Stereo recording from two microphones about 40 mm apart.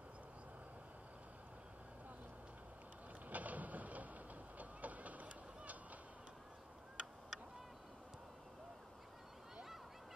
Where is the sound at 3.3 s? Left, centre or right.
Right.